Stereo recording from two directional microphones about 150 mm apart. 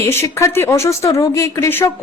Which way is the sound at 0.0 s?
15° left (ahead or behind).